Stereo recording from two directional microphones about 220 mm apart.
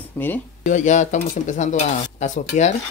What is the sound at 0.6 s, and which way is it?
Speech, 35° left (ahead or behind).